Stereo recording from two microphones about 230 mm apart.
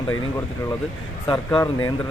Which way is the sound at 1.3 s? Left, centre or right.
Centre.